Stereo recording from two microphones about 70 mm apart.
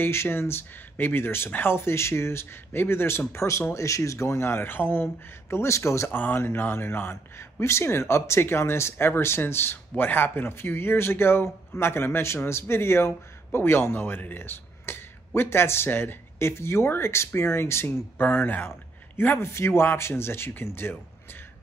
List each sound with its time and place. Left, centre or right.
0.0 s speech: left
4.5 s speech: left
6.1 s speech: left